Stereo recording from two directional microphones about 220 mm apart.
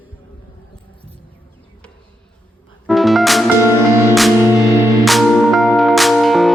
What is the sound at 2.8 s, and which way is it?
Music, centre (ahead or behind).